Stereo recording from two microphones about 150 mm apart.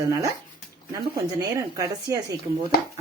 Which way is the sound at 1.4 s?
20° right (ahead or behind).